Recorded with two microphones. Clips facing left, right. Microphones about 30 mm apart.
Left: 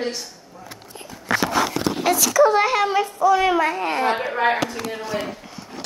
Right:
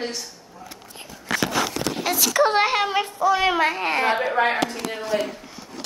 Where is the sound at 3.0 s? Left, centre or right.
Right.